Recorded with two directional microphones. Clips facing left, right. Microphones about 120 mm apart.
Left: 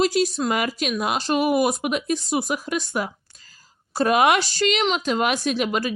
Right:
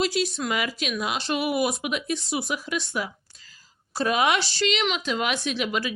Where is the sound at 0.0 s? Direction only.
45° left (ahead or behind).